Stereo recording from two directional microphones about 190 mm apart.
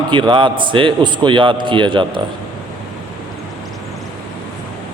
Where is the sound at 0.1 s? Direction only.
25° right (ahead or behind).